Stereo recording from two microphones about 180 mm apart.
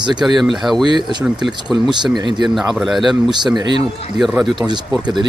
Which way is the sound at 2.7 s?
Centre (ahead or behind).